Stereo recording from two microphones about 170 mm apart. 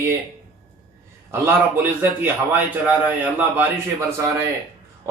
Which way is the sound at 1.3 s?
15° right (ahead or behind).